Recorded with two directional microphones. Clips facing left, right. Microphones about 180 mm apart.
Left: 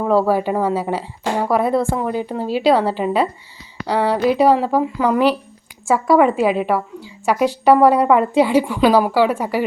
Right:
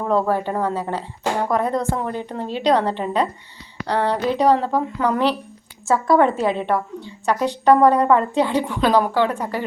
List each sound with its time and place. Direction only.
0.0 s a woman's voice: 10° left (ahead or behind)